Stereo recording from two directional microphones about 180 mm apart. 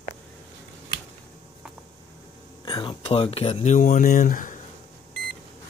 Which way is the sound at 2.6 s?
25° left (ahead or behind).